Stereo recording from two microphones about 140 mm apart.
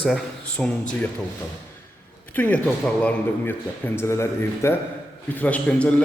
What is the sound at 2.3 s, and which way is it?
A man's voice, 10° left (ahead or behind).